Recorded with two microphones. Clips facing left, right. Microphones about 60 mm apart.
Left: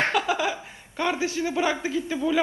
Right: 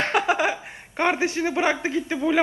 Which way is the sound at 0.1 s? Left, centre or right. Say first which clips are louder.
Right 3 dB; right.